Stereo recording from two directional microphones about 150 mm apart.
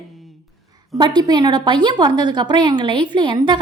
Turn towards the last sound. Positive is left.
turn(degrees=-30)  # may be behind; listen again after turning